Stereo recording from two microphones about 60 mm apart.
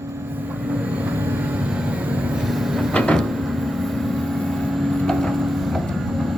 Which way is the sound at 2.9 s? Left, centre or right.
Centre.